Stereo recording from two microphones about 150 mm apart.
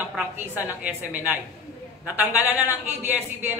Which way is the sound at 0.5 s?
10° right (ahead or behind).